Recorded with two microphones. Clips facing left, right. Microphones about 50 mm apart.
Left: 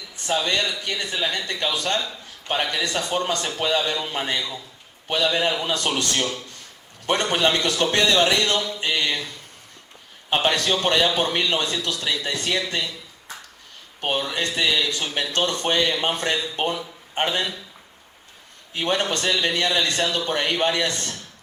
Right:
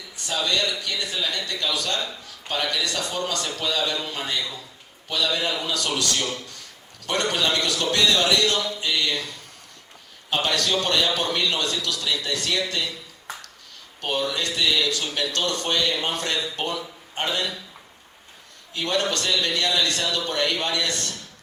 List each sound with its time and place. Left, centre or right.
0.3 s a man's voice: left
10.2 s speech: left
14.0 s speech: left
18.7 s speech: left